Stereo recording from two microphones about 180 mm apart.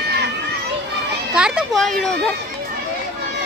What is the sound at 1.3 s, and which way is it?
Children playing, centre (ahead or behind).